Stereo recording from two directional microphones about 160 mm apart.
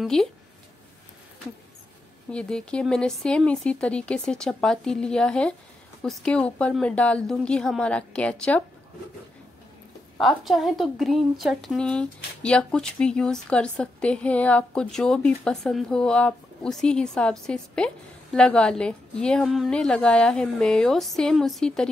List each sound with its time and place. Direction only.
0.0 s a woman's voice: 5° left (ahead or behind)
2.3 s a woman's voice: 5° left (ahead or behind)
10.1 s a woman's voice: centre (ahead or behind)